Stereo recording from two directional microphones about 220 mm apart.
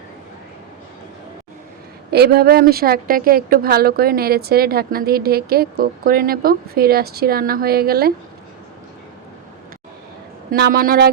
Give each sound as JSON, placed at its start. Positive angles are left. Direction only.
{"t": 2.0, "sound": "a woman's voice", "side_deg": -45}
{"t": 10.5, "sound": "a woman's voice", "side_deg": -45}